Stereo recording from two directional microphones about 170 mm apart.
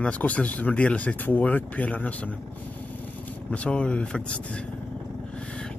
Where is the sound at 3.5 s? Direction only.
5° left (ahead or behind).